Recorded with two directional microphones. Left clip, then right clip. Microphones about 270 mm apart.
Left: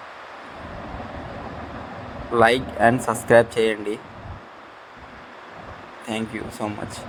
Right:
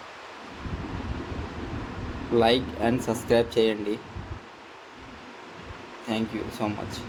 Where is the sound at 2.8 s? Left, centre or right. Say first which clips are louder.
Left 8 dB; centre.